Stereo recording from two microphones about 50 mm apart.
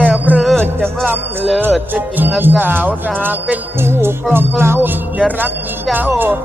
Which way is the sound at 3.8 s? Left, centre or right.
Right.